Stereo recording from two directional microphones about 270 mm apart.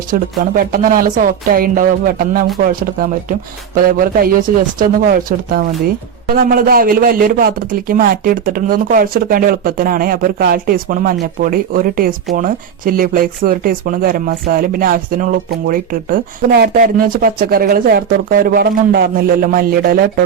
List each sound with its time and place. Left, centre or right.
0.1 s a man's voice: right